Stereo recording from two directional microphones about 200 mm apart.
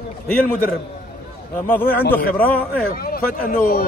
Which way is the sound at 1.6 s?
10° left (ahead or behind).